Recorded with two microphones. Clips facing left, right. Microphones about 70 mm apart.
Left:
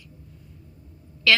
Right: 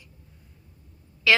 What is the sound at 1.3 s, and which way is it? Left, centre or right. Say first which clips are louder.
Speech: even; centre.